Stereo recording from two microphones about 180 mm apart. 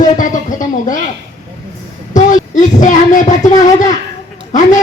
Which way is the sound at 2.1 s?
45° left (ahead or behind).